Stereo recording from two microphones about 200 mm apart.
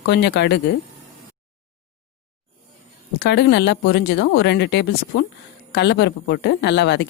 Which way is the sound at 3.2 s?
60° left (ahead or behind).